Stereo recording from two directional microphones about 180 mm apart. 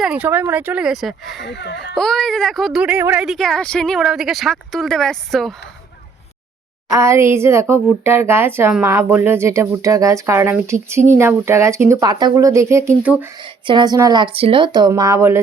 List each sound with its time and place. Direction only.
0.0 s speech: 5° right (ahead or behind)
1.5 s a child's voice: 75° left (ahead or behind)
2.0 s speech: centre (ahead or behind)
6.9 s speech: 15° right (ahead or behind)
13.7 s speech: 25° right (ahead or behind)